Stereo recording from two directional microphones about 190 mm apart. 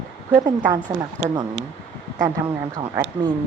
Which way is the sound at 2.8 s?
25° right (ahead or behind).